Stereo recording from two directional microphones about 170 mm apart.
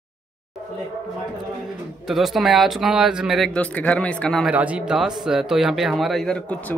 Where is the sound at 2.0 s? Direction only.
Centre (ahead or behind).